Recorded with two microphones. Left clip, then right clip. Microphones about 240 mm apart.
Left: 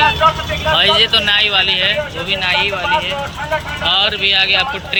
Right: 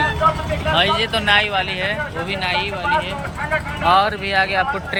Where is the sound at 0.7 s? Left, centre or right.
Centre.